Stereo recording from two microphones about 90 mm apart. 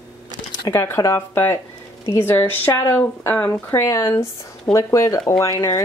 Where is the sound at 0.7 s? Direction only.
25° left (ahead or behind).